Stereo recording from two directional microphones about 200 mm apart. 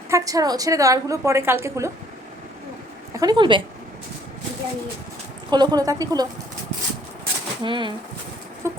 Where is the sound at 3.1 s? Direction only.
20° right (ahead or behind).